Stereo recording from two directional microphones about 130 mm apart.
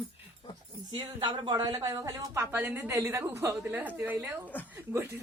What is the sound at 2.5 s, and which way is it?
A woman's voice, 15° right (ahead or behind).